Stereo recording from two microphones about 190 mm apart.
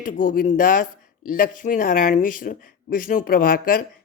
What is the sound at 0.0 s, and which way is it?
Speech, 45° left (ahead or behind).